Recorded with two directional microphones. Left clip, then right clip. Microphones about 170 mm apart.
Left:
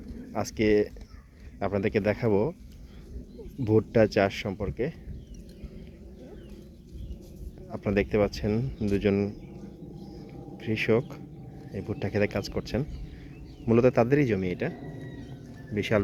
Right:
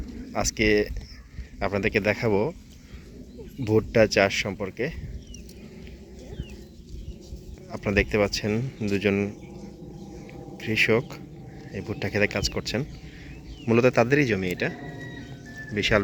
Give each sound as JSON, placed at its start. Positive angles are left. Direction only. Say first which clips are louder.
{"t": 0.3, "sound": "speech", "louder": "right 2 dB", "side_deg": 15}
{"t": 3.6, "sound": "speech", "louder": "right 2 dB", "side_deg": 15}
{"t": 7.7, "sound": "speech", "louder": "right 3 dB", "side_deg": 15}
{"t": 10.6, "sound": "speech", "louder": "right 4 dB", "side_deg": 10}
{"t": 15.7, "sound": "speech", "louder": "right 5 dB", "side_deg": 10}